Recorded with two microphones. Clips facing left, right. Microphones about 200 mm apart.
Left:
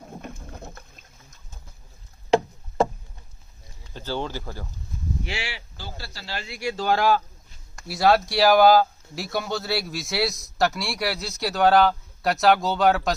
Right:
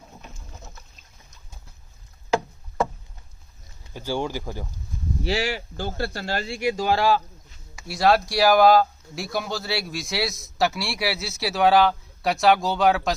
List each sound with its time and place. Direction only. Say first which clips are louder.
0.1 s boat: left 7 dB; 55° left (ahead or behind)
2.3 s rowboat: left 4 dB; 30° left (ahead or behind)
3.9 s speech: right 2 dB; 10° right (ahead or behind)
5.2 s speech: right 8 dB; 40° right (ahead or behind)
6.5 s speech: right 3 dB; 20° right (ahead or behind)
6.8 s speech: left 2 dB; 5° right (ahead or behind)